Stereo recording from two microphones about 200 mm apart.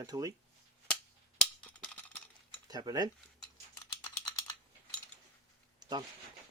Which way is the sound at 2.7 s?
20° right (ahead or behind).